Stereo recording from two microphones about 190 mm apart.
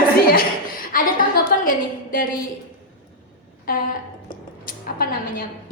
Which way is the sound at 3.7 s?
50° left (ahead or behind).